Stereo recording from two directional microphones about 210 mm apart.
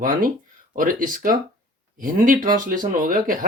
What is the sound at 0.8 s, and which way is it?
Speech, 40° right (ahead or behind).